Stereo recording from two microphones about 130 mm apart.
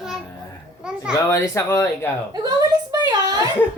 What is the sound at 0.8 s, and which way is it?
Speech, 5° right (ahead or behind).